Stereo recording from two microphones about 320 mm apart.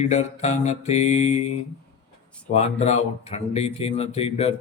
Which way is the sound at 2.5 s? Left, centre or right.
Left.